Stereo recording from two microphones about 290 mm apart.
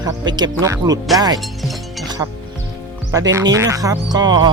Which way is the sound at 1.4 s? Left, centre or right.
Centre.